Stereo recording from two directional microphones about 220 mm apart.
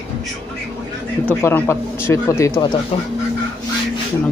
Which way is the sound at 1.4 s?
10° left (ahead or behind).